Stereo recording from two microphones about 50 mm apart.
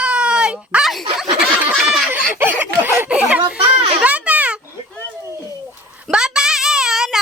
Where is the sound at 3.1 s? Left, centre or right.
Right.